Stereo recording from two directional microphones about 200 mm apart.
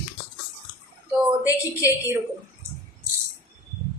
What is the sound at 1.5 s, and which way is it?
Speech, 15° left (ahead or behind).